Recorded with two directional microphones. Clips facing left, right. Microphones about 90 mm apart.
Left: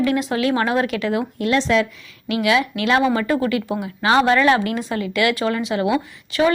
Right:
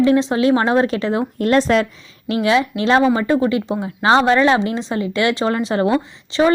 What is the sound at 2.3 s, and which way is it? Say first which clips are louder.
A woman's voice: right 2 dB; 30° right (ahead or behind).